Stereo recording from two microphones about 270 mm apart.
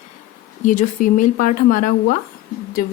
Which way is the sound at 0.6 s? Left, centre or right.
Left.